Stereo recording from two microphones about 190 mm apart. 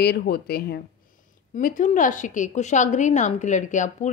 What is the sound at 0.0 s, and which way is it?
Speech, 60° left (ahead or behind).